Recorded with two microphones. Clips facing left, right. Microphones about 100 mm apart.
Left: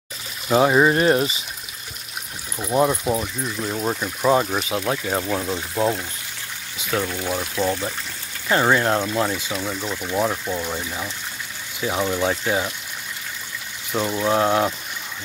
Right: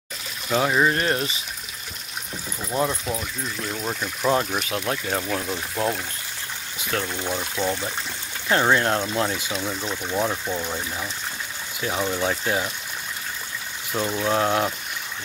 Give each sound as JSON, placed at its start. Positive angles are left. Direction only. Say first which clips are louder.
{"t": 0.5, "sound": "speech", "louder": "left 5 dB", "side_deg": 20}
{"t": 2.6, "sound": "speech", "louder": "left 6 dB", "side_deg": 15}
{"t": 13.9, "sound": "speech", "louder": "left 3 dB", "side_deg": 10}